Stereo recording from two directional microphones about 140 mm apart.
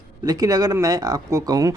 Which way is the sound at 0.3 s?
25° right (ahead or behind).